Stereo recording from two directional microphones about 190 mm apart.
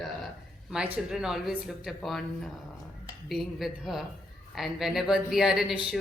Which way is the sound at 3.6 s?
Centre (ahead or behind).